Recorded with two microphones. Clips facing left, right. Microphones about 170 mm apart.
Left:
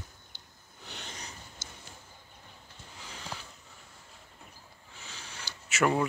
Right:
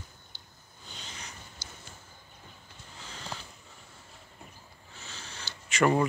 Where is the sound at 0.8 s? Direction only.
65° left (ahead or behind).